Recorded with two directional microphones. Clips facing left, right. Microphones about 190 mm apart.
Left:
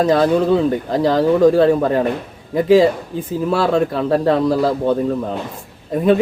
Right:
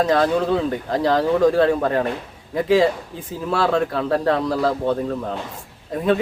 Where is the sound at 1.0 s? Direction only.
5° left (ahead or behind).